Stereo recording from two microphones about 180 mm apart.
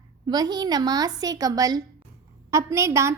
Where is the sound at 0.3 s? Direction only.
25° right (ahead or behind).